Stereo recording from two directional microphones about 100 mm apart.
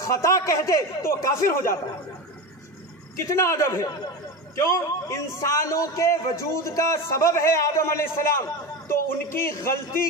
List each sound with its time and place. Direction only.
0.0 s a man's voice: 30° left (ahead or behind)
3.2 s a man's voice: 30° left (ahead or behind)